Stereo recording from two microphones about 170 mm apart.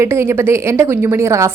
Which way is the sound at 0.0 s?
15° right (ahead or behind).